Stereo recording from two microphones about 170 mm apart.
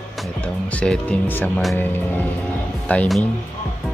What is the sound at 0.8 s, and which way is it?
Speech, 10° left (ahead or behind).